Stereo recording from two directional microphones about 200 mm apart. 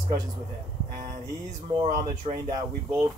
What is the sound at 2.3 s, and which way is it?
Speech, 30° right (ahead or behind).